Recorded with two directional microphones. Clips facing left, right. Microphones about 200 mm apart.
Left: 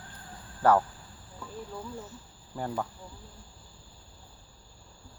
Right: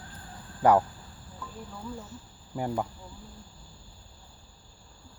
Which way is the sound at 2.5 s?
15° right (ahead or behind).